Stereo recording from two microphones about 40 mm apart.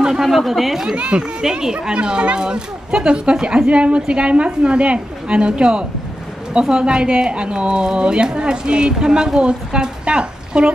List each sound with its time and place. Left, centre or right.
0.0 s a sound: centre
0.5 s speech: centre
0.9 s a woman's voice: right
1.4 s a woman's voice: centre